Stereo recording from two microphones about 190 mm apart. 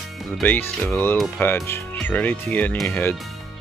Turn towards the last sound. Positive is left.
turn(degrees=10)  # may be behind; listen again after turning